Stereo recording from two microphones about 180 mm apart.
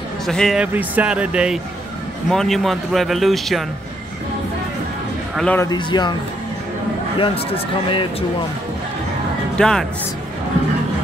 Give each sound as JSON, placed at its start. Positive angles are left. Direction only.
{"t": 0.3, "sound": "speech", "side_deg": 0}
{"t": 5.3, "sound": "speech", "side_deg": 5}
{"t": 5.6, "sound": "speech", "side_deg": 25}
{"t": 7.2, "sound": "speech", "side_deg": 30}
{"t": 9.6, "sound": "speech", "side_deg": 5}